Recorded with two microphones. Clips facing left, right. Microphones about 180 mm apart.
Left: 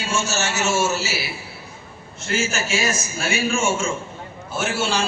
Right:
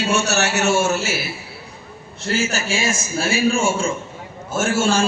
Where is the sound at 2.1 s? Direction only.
35° right (ahead or behind).